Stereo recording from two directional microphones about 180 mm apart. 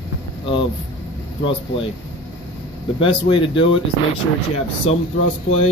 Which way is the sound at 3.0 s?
30° left (ahead or behind).